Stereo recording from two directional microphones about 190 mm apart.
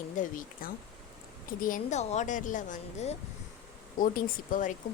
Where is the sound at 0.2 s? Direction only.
45° left (ahead or behind).